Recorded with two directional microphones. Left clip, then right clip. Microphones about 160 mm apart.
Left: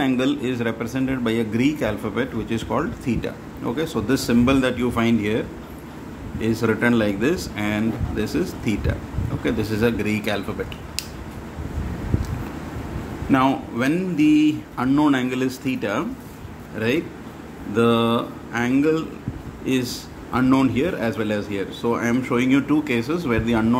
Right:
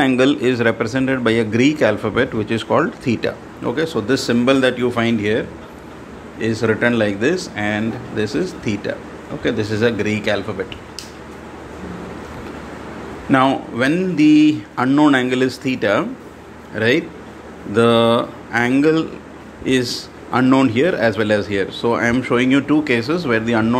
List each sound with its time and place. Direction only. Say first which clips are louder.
0.0 s speech: right 7 dB; 20° right (ahead or behind)
6.4 s speech: right 4 dB; 5° right (ahead or behind)
13.3 s speech: right 4 dB; 10° right (ahead or behind)